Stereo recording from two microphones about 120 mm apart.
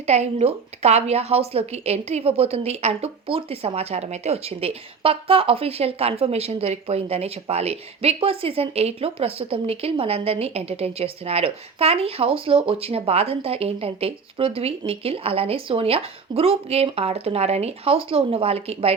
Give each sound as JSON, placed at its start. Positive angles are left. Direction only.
{"t": 0.0, "sound": "a woman's voice", "side_deg": -65}